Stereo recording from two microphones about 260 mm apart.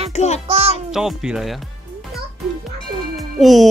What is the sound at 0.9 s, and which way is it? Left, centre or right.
Speech, centre.